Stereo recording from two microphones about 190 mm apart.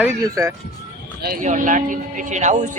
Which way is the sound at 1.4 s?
40° right (ahead or behind).